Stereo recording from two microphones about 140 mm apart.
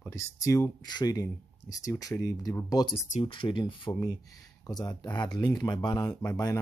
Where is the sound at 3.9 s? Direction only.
25° left (ahead or behind).